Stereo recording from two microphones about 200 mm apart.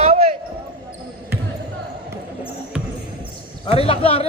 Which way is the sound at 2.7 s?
5° right (ahead or behind).